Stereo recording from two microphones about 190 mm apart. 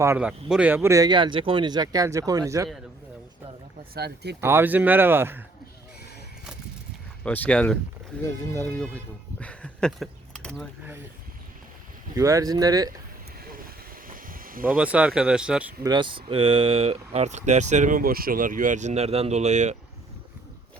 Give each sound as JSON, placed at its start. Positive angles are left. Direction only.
{"t": 0.0, "sound": "speech", "side_deg": -10}
{"t": 3.9, "sound": "speech", "side_deg": -60}
{"t": 4.4, "sound": "speech", "side_deg": -15}
{"t": 7.3, "sound": "speech", "side_deg": 5}
{"t": 9.4, "sound": "a sound", "side_deg": 5}
{"t": 12.1, "sound": "speech", "side_deg": -15}
{"t": 13.4, "sound": "vehicle", "side_deg": -50}
{"t": 14.1, "sound": "snake", "side_deg": -45}
{"t": 14.8, "sound": "speech", "side_deg": -5}
{"t": 15.8, "sound": "speech", "side_deg": -25}